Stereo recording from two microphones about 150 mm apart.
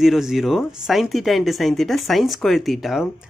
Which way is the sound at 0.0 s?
Centre (ahead or behind).